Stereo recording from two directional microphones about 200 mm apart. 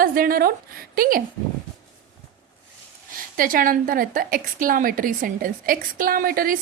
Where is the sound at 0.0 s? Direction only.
45° right (ahead or behind).